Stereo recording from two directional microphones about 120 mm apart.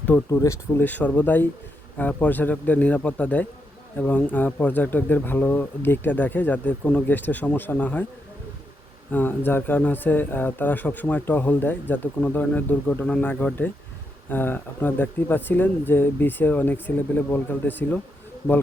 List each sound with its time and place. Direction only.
0.3 s speech: 25° left (ahead or behind)
0.9 s speech: 15° left (ahead or behind)
9.1 s speech: 15° left (ahead or behind)